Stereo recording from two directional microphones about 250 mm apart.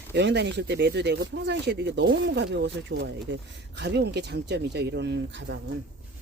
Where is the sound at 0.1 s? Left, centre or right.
Right.